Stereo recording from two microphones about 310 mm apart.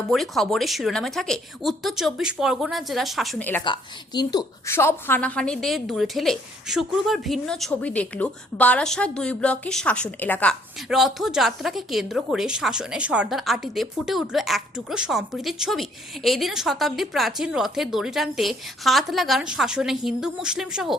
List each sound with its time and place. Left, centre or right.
0.1 s a woman's voice: centre